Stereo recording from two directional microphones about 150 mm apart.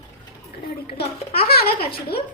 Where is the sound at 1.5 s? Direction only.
90° left.